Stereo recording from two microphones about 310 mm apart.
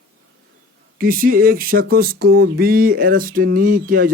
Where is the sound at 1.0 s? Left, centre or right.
Right.